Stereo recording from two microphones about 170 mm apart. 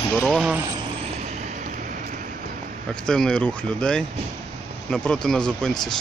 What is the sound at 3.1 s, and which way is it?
Speech, 5° left (ahead or behind).